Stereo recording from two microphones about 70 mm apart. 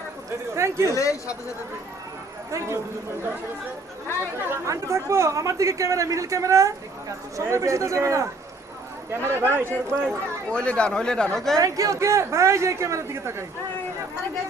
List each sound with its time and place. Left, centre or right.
0.5 s speech: right
0.9 s speech: left
2.5 s speech: right
4.4 s speech: right
10.5 s speech: centre
11.5 s speech: right